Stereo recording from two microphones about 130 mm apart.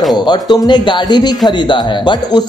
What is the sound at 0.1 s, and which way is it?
Speech, 30° left (ahead or behind).